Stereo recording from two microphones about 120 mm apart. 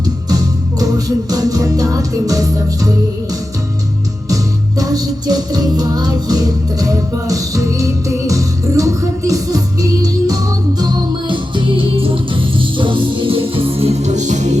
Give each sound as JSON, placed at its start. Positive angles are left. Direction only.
{"t": 0.3, "sound": "music", "side_deg": -30}
{"t": 4.8, "sound": "music", "side_deg": -30}